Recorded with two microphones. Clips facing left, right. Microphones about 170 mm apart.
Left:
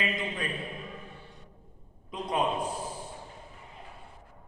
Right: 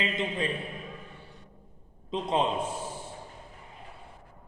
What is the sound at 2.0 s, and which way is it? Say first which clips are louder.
Speech: right 2 dB; 25° right (ahead or behind).